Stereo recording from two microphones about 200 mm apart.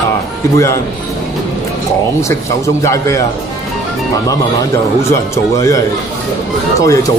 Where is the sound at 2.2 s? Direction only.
15° left (ahead or behind).